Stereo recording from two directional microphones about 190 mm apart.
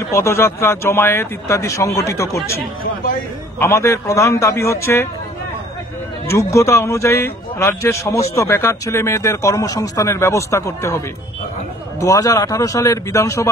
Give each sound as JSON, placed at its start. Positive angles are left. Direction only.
{"t": 0.1, "sound": "speech", "side_deg": 15}
{"t": 3.5, "sound": "speech", "side_deg": 15}
{"t": 6.3, "sound": "speech", "side_deg": 15}
{"t": 12.0, "sound": "speech", "side_deg": 15}